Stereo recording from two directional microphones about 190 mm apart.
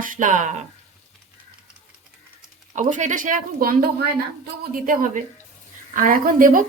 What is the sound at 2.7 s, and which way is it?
Speech, 40° right (ahead or behind).